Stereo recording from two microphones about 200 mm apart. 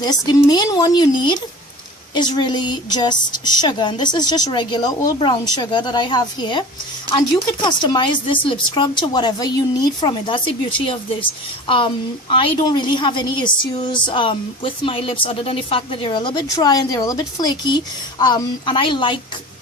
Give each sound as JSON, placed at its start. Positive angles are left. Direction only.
{"t": 0.0, "sound": "speech", "side_deg": 20}